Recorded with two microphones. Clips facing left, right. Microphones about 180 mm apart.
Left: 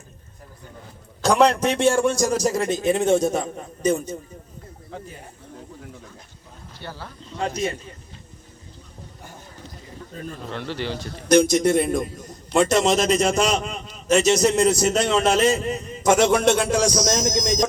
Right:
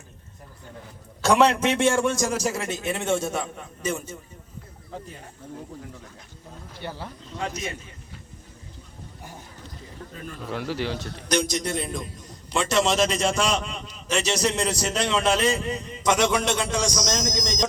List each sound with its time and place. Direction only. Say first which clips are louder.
1.2 s a man's voice: left 2 dB; 35° left (ahead or behind)
6.8 s speech: right 2 dB; 15° right (ahead or behind)
7.4 s a man's voice: left 6 dB; 35° left (ahead or behind)
10.5 s speech: right 1 dB; 5° right (ahead or behind)
11.3 s a man's voice: left 9 dB; 50° left (ahead or behind)
17.4 s speech: left 5 dB; 10° left (ahead or behind)